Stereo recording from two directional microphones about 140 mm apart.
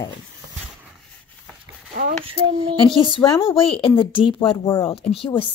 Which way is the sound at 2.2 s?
40° right (ahead or behind).